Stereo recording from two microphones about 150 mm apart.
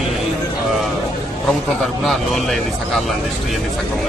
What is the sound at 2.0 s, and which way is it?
Speech, centre (ahead or behind).